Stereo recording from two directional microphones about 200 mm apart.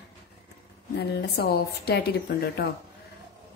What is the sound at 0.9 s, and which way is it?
Speech, 50° left (ahead or behind).